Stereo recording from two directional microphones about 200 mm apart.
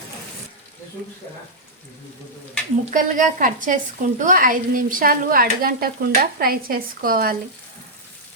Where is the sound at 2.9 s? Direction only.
40° right (ahead or behind).